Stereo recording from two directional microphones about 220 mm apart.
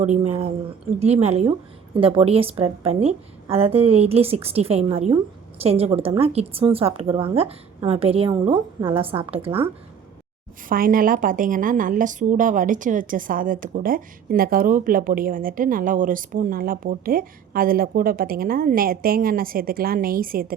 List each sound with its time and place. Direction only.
0.0 s a woman's voice: 30° right (ahead or behind)
10.7 s a woman's voice: 40° right (ahead or behind)